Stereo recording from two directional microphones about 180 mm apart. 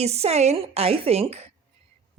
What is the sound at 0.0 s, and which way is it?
Speech, 35° right (ahead or behind).